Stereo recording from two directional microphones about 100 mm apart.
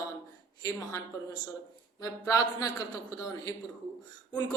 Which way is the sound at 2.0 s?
35° left (ahead or behind).